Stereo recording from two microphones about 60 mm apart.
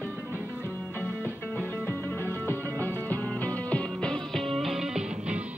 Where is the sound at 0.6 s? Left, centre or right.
Left.